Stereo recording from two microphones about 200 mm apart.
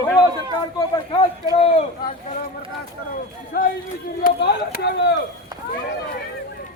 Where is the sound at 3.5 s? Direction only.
50° left (ahead or behind).